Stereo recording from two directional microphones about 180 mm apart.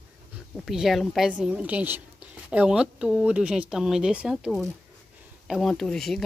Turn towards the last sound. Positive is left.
turn(degrees=0)  # may be behind; listen again after turning